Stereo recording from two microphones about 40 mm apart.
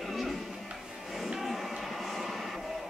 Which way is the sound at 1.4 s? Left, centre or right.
Centre.